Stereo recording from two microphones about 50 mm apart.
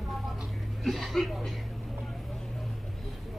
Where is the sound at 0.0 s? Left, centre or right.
Centre.